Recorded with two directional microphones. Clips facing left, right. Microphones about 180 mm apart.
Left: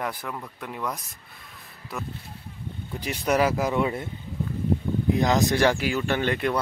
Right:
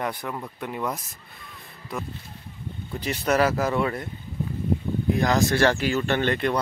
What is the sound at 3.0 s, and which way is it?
Speech, 10° left (ahead or behind).